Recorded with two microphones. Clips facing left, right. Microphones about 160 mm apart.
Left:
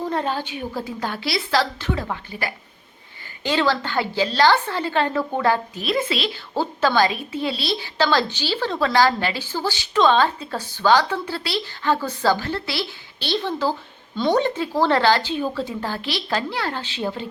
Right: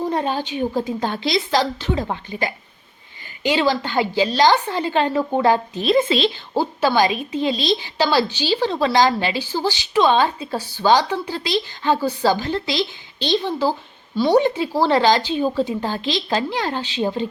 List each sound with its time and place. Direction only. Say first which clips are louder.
0.0 s a woman's voice: right 2 dB; 15° right (ahead or behind)
6.6 s a woman's voice: right 2 dB; 15° right (ahead or behind)